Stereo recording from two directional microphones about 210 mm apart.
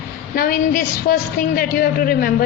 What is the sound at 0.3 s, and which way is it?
Speech, 45° left (ahead or behind).